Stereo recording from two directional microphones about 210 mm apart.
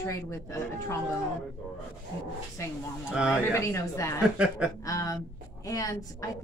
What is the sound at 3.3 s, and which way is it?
A woman's voice, 15° left (ahead or behind).